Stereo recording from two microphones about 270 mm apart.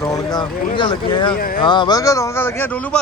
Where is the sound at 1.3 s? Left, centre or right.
Left.